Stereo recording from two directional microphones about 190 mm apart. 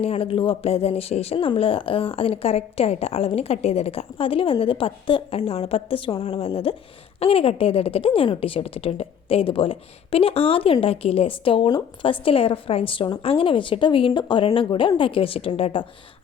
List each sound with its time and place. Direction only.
0.0 s a woman's voice: 30° left (ahead or behind)